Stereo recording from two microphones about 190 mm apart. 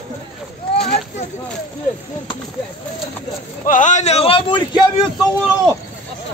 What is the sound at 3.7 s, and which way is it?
A man's voice, 40° left (ahead or behind).